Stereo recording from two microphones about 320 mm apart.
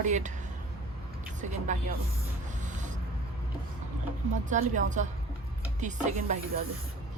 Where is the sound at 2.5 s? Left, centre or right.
Right.